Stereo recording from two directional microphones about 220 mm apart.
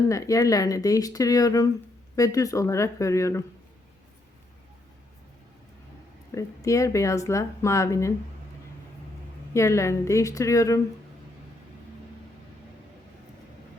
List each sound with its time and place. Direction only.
0.1 s speech: 15° left (ahead or behind)
6.3 s speech: 15° left (ahead or behind)
9.5 s speech: 15° left (ahead or behind)